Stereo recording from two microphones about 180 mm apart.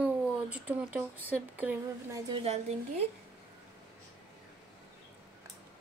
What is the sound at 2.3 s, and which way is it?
Speech, 35° right (ahead or behind).